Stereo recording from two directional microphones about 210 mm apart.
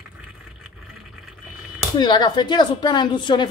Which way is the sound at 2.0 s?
20° left (ahead or behind).